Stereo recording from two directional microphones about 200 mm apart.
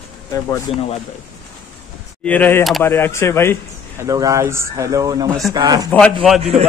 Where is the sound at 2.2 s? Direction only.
10° left (ahead or behind).